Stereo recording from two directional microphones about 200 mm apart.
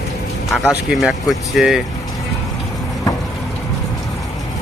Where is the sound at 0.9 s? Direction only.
Centre (ahead or behind).